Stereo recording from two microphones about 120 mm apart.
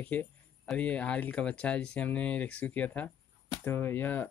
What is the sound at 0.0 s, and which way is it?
Speech, 15° left (ahead or behind).